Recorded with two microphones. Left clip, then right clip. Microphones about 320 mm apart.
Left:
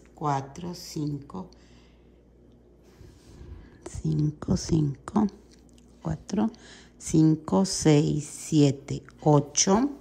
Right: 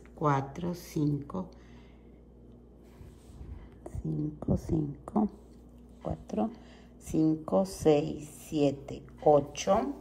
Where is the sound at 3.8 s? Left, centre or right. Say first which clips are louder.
Left 5 dB; right.